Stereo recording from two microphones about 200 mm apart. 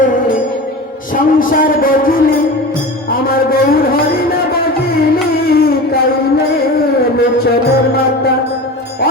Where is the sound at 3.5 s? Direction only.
50° left (ahead or behind).